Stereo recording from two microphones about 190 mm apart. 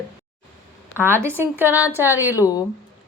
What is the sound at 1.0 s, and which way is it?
Speech, 10° left (ahead or behind).